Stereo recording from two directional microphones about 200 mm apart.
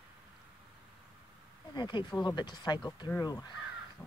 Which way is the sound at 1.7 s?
20° left (ahead or behind).